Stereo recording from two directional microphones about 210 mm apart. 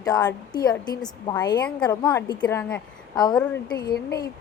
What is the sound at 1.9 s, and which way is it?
Speech, 20° left (ahead or behind).